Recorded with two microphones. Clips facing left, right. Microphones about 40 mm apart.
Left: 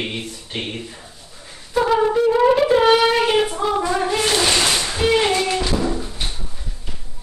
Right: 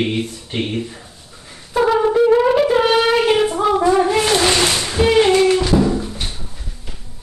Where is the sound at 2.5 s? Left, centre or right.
Centre.